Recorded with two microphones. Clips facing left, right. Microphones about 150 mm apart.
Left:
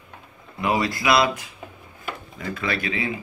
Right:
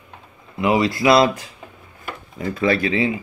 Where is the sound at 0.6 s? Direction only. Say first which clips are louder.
Right 5 dB; 25° right (ahead or behind).